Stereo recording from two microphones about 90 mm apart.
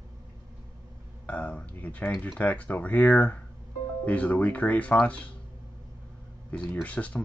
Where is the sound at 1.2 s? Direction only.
15° left (ahead or behind).